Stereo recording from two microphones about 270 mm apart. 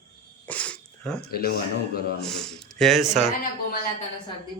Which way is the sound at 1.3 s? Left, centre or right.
Left.